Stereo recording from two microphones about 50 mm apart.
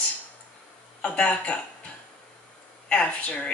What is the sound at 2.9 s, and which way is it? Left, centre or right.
Speech, left.